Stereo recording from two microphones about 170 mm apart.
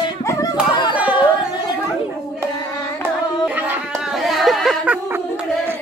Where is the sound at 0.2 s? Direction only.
20° left (ahead or behind).